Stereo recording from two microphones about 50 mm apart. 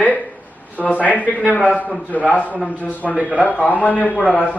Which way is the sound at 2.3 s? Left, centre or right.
Left.